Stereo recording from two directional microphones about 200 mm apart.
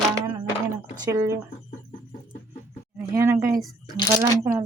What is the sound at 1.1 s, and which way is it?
Speech, 15° right (ahead or behind).